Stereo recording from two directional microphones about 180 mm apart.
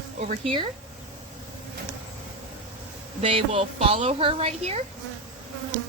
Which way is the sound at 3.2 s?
30° right (ahead or behind).